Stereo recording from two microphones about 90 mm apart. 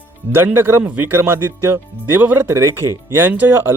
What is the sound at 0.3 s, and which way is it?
Speech, 25° right (ahead or behind).